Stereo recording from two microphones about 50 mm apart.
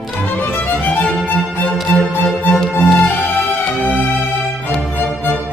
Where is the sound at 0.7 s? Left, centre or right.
Left.